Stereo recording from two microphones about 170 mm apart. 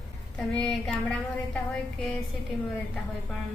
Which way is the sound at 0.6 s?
5° left (ahead or behind).